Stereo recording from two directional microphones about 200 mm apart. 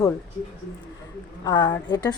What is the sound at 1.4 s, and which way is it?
Speech, 20° left (ahead or behind).